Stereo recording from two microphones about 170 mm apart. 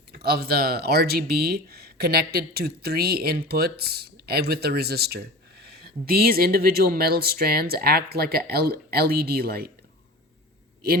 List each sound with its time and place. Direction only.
0.1 s speech: 65° right (ahead or behind)